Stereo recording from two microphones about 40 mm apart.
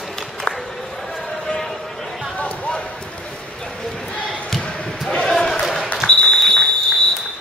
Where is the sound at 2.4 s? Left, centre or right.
Left.